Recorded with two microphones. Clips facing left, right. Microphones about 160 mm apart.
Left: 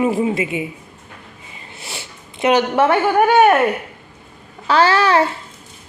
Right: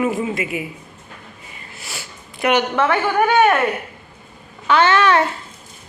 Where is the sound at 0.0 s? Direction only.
30° left (ahead or behind).